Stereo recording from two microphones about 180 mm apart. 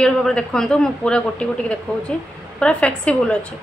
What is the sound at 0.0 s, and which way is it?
A woman's voice, 5° left (ahead or behind).